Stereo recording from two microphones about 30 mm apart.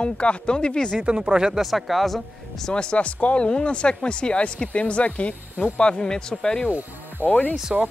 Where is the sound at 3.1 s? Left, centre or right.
Left.